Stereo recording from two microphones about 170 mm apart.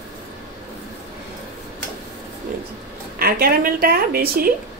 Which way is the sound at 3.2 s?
60° right (ahead or behind).